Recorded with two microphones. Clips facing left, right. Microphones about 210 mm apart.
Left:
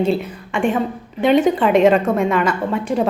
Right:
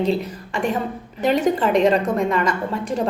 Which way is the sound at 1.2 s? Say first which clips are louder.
Left 4 dB; centre (ahead or behind).